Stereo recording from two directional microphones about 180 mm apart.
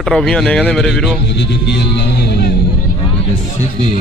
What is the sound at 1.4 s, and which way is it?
Speech, 70° left (ahead or behind).